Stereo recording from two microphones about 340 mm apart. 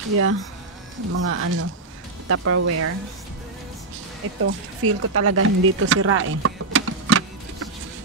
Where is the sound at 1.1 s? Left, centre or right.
Right.